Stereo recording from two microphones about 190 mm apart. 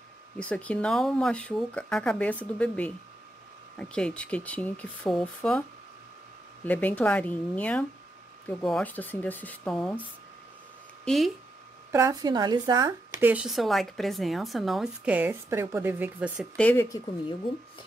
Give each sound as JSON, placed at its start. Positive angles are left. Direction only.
{"t": 0.4, "sound": "a woman's voice", "side_deg": 5}
{"t": 6.6, "sound": "speech", "side_deg": 10}
{"t": 11.1, "sound": "a woman's voice", "side_deg": 0}
{"t": 11.9, "sound": "a woman's voice", "side_deg": -15}
{"t": 13.2, "sound": "a woman's voice", "side_deg": -5}
{"t": 16.5, "sound": "speech", "side_deg": 10}